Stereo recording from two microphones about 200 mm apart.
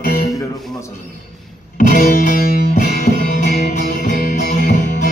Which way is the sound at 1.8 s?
40° left (ahead or behind).